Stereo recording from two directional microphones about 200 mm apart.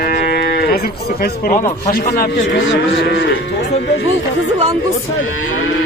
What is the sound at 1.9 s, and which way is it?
Speech, 45° left (ahead or behind).